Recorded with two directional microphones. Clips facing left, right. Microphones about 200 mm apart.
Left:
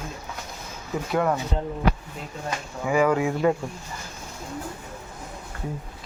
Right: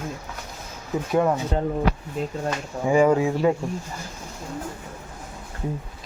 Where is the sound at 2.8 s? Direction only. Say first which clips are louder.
Right 3 dB; 25° right (ahead or behind).